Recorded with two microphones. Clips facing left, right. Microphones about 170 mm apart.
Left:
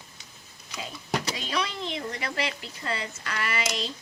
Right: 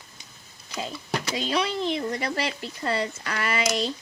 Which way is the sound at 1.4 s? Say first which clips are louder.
Right 5 dB; 30° right (ahead or behind).